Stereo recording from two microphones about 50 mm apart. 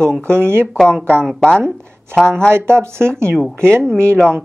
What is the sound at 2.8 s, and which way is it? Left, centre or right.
Speech, right.